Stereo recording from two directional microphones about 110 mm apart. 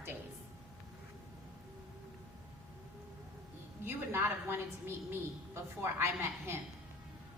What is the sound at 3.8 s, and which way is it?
A woman's voice, 20° right (ahead or behind).